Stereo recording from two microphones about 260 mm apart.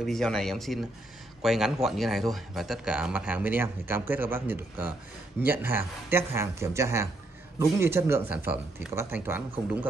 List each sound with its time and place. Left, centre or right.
0.0 s speech: centre